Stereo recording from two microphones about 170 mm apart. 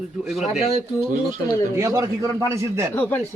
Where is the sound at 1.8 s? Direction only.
15° right (ahead or behind).